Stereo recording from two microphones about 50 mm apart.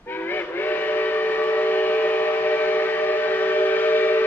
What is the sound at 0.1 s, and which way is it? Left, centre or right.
Train, left.